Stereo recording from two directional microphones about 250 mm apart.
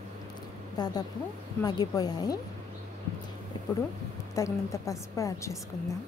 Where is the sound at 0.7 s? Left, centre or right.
Centre.